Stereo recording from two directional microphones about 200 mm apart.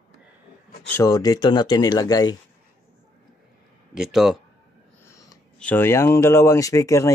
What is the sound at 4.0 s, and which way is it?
Speech, centre (ahead or behind).